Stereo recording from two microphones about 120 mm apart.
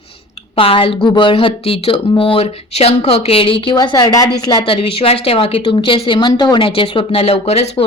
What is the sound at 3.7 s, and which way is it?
Speech, 35° left (ahead or behind).